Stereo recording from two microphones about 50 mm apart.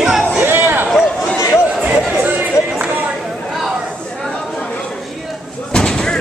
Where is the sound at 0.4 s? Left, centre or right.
Right.